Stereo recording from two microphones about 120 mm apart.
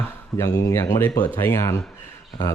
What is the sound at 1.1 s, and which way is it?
Speech, 30° left (ahead or behind).